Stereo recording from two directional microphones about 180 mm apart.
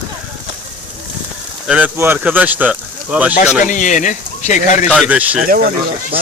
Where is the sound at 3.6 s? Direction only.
45° left (ahead or behind).